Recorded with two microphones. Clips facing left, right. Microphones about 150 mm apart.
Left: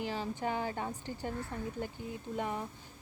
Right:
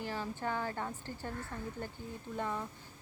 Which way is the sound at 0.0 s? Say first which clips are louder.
Left 2 dB; 20° left (ahead or behind).